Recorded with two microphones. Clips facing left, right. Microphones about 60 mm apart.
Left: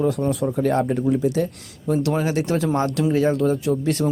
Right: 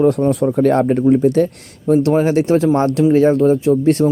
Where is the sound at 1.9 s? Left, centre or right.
Right.